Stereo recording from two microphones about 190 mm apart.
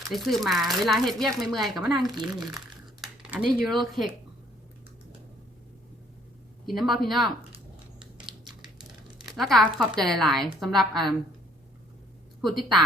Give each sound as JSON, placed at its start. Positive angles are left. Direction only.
{"t": 0.1, "sound": "speech", "side_deg": 0}
{"t": 6.7, "sound": "speech", "side_deg": 0}
{"t": 7.5, "sound": "a sound", "side_deg": -25}
{"t": 9.2, "sound": "speech", "side_deg": 0}
{"t": 12.4, "sound": "a woman's voice", "side_deg": 0}